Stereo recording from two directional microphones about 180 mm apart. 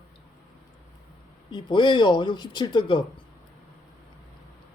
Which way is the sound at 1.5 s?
25° left (ahead or behind).